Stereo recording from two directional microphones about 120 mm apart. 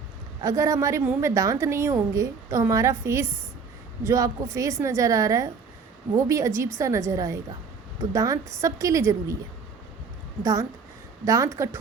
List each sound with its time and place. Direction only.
0.4 s a woman's voice: 25° right (ahead or behind)
10.4 s a woman's voice: 25° right (ahead or behind)